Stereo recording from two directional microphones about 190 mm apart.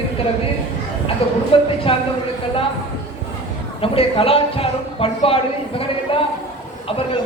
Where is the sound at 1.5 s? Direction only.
30° left (ahead or behind).